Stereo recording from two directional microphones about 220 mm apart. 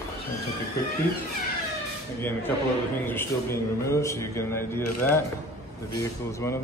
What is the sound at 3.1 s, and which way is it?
A man's voice, 10° left (ahead or behind).